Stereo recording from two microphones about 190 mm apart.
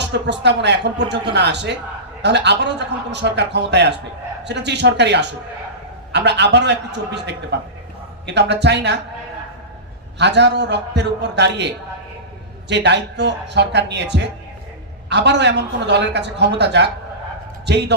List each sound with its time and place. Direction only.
0.0 s a man's voice: 65° right (ahead or behind)
10.2 s a man's voice: 65° right (ahead or behind)